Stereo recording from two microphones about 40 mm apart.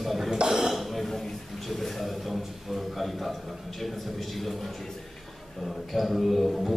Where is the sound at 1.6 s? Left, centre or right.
Centre.